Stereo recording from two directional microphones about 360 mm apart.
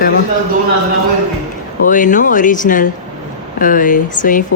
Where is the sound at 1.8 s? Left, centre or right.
Left.